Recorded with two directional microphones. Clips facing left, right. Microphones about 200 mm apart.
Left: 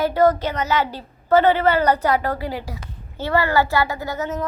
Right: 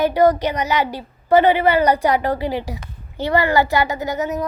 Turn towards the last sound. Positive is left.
turn(degrees=-15)  # may be behind; listen again after turning